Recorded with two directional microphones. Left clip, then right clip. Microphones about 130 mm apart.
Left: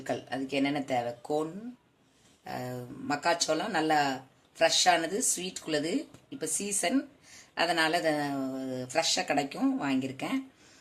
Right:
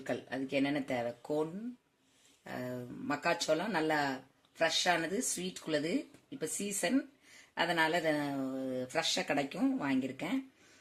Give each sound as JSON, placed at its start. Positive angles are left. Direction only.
{"t": 0.1, "sound": "speech", "side_deg": -65}
{"t": 2.4, "sound": "speech", "side_deg": -60}
{"t": 7.5, "sound": "speech", "side_deg": -55}